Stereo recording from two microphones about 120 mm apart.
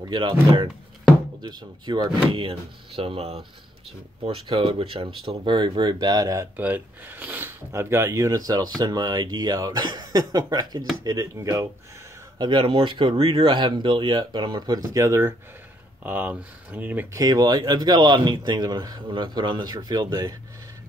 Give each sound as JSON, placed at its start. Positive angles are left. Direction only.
{"t": 0.0, "sound": "speech", "side_deg": -40}
{"t": 3.0, "sound": "speech", "side_deg": -55}
{"t": 4.2, "sound": "speech", "side_deg": -45}
{"t": 6.5, "sound": "speech", "side_deg": -15}
{"t": 12.4, "sound": "speech", "side_deg": -40}
{"t": 16.0, "sound": "speech", "side_deg": -15}
{"t": 17.2, "sound": "speech", "side_deg": -35}